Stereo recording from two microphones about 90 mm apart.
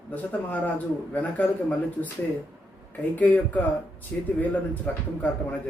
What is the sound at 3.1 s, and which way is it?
A man's voice, 15° left (ahead or behind).